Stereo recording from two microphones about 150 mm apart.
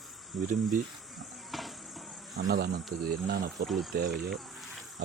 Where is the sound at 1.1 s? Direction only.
Centre (ahead or behind).